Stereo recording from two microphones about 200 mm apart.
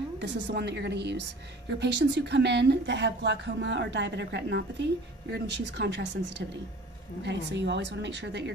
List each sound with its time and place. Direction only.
0.2 s a woman's voice: 60° right (ahead or behind)